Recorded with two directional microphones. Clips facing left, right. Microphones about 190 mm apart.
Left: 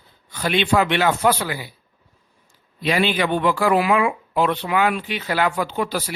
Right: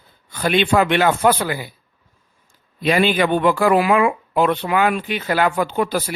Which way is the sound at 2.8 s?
50° right (ahead or behind).